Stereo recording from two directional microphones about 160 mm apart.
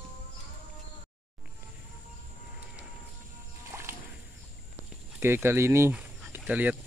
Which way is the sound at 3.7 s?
20° right (ahead or behind).